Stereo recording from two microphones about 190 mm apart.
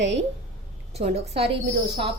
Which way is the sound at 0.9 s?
35° right (ahead or behind).